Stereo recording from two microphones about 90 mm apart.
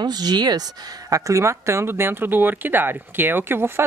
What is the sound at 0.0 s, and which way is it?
A woman's voice, 50° right (ahead or behind).